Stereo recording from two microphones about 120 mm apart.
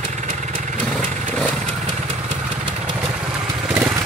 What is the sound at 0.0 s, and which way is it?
Vehicle, 90° right.